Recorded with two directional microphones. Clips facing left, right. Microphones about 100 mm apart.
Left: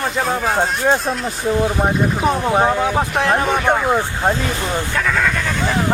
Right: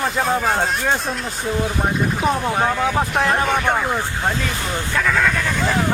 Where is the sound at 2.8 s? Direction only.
5° left (ahead or behind).